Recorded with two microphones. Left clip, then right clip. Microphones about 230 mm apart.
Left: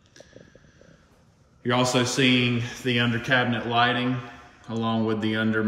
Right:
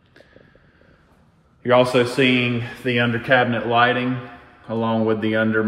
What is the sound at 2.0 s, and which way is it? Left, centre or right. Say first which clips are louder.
Speech: right 4 dB; centre.